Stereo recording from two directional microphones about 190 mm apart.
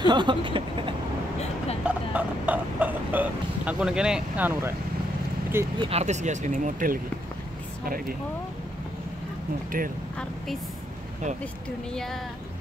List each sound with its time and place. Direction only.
0.0 s vehicle: 25° right (ahead or behind)
1.9 s speech: 5° right (ahead or behind)
5.8 s speech: 30° right (ahead or behind); by 8.2 s 50° right (ahead or behind)
9.7 s speech: 45° right (ahead or behind)
11.9 s speech: centre (ahead or behind)